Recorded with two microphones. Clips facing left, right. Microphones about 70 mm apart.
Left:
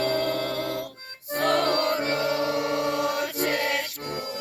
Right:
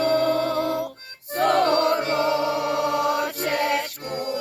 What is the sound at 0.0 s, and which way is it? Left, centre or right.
Music, centre.